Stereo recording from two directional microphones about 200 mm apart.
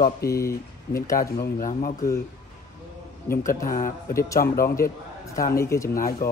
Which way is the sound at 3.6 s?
45° left (ahead or behind).